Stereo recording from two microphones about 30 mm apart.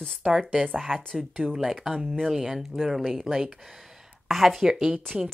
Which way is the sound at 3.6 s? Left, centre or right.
Centre.